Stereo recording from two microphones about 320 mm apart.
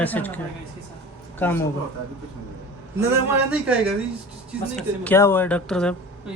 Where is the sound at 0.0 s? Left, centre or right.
Centre.